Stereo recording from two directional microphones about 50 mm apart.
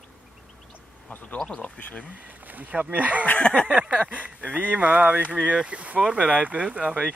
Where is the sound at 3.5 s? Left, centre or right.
Left.